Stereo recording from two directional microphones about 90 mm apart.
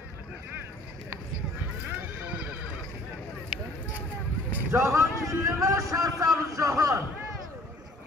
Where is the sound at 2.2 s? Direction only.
15° right (ahead or behind).